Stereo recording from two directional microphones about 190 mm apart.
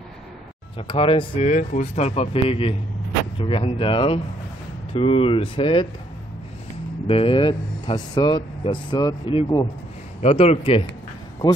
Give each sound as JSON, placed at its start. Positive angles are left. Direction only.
{"t": 0.7, "sound": "speech", "side_deg": 30}
{"t": 7.1, "sound": "speech", "side_deg": 30}